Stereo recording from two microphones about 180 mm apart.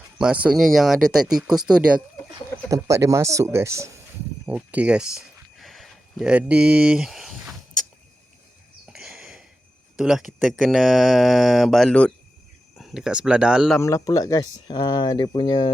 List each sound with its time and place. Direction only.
0.2 s speech: 5° right (ahead or behind)
2.3 s speech: 20° right (ahead or behind); by 7.5 s centre (ahead or behind)
8.9 s sniff: centre (ahead or behind)
10.0 s speech: centre (ahead or behind)
13.7 s speech: 15° left (ahead or behind)